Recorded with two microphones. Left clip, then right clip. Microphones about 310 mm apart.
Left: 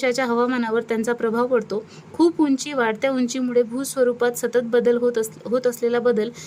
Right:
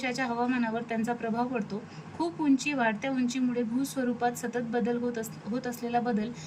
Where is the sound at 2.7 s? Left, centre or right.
Centre.